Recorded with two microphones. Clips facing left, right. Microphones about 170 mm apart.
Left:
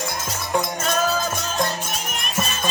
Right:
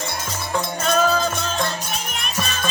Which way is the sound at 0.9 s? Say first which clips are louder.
Right 4 dB; 5° left (ahead or behind).